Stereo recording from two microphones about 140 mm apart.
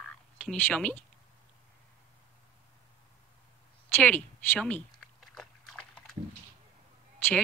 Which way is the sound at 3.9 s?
10° left (ahead or behind).